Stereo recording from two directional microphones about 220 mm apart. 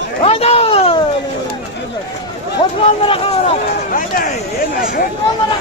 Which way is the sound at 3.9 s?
40° left (ahead or behind).